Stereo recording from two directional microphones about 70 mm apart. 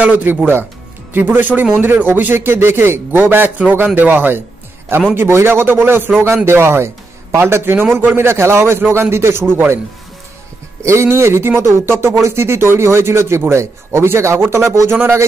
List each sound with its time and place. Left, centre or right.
0.0 s a man's voice: right
10.8 s speech: right